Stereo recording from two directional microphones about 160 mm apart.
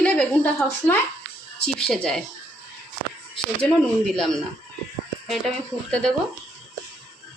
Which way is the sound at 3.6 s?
5° left (ahead or behind).